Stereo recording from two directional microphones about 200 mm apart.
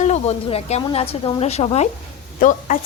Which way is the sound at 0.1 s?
30° left (ahead or behind).